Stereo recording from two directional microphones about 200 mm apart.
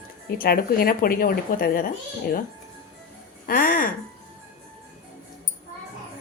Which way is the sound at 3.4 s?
45° left (ahead or behind).